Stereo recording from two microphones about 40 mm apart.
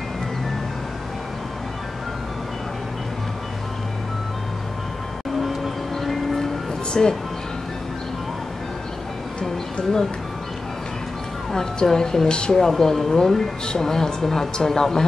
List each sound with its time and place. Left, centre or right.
5.4 s music: centre
6.9 s speech: centre
11.5 s a woman's voice: centre